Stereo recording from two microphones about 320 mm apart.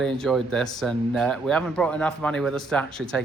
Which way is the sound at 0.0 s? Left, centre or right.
Centre.